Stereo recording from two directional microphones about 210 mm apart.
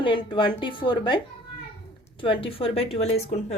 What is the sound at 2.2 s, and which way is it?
A woman's voice, 25° left (ahead or behind).